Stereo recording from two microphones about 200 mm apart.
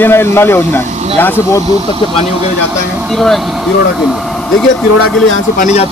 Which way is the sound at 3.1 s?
Centre (ahead or behind).